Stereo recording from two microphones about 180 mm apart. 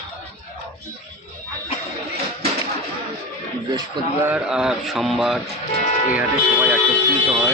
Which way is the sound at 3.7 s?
20° right (ahead or behind).